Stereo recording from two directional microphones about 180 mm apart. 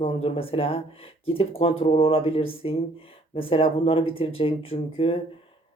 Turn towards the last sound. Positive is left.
turn(degrees=35)  # may be behind; listen again after turning